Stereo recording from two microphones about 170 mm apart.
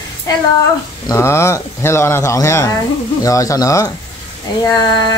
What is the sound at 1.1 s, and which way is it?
Speech, 15° left (ahead or behind).